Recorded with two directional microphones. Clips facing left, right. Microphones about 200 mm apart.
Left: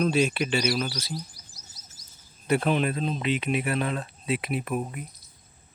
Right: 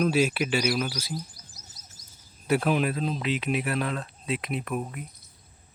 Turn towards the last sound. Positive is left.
turn(degrees=5)  # may be behind; listen again after turning